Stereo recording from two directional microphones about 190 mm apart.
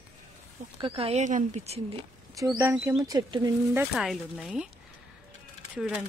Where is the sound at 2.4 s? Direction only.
15° right (ahead or behind).